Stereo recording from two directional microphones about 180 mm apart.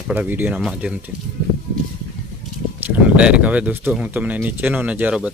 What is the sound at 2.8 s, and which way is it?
Speech, 10° right (ahead or behind).